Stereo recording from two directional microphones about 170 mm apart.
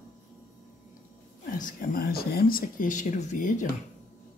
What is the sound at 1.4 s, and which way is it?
Speech, 50° left (ahead or behind).